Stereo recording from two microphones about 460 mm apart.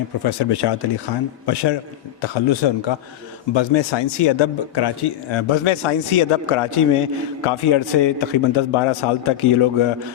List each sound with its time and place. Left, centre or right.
0.2 s a man's voice: left
2.2 s a man's voice: left